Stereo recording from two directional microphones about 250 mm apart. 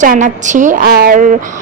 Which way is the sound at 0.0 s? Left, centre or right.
Right.